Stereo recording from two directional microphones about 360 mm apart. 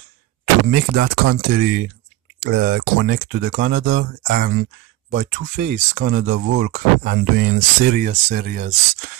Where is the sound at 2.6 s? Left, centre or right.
Right.